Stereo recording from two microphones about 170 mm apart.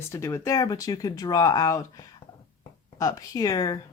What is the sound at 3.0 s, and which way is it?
Speech, 20° left (ahead or behind).